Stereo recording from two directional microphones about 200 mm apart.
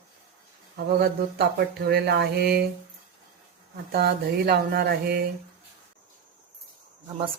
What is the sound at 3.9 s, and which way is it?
A woman's voice, 50° right (ahead or behind).